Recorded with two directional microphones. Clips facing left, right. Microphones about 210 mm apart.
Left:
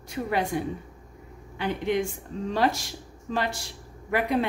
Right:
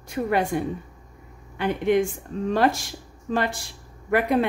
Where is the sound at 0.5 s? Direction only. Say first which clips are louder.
Right 3 dB; 55° right (ahead or behind).